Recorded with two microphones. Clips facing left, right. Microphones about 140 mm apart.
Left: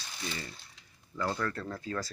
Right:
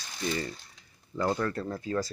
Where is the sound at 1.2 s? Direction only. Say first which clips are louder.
Right 4 dB; 25° right (ahead or behind).